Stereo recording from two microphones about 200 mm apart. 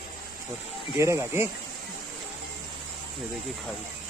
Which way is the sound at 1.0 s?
15° right (ahead or behind).